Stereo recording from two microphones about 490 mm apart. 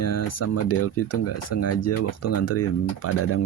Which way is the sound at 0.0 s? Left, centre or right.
Left.